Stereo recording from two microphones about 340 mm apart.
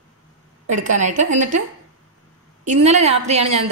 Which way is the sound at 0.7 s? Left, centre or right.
Right.